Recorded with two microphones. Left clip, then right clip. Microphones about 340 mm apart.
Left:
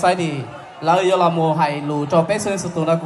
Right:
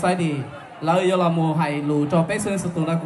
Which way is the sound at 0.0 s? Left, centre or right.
Centre.